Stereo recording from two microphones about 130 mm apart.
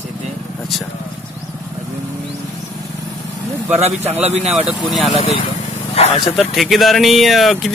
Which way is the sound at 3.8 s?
55° right (ahead or behind).